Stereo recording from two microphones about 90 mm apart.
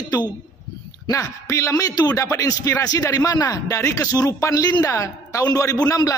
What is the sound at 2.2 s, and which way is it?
A man's voice, 35° left (ahead or behind).